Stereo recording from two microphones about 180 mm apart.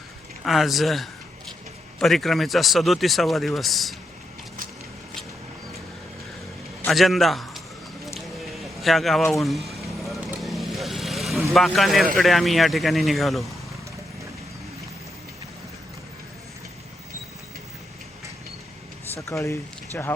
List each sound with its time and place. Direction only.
0.4 s speech: centre (ahead or behind)
6.8 s a man's voice: centre (ahead or behind)
8.5 s vehicle: centre (ahead or behind)
11.5 s speech: centre (ahead or behind)
19.2 s speech: 15° left (ahead or behind)